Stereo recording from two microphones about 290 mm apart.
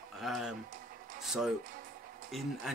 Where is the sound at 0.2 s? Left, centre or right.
Centre.